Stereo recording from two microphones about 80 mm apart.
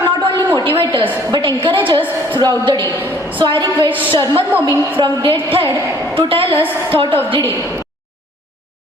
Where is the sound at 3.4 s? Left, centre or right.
Right.